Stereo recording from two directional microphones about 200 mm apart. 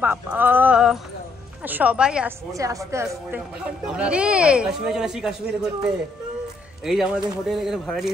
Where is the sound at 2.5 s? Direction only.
15° right (ahead or behind).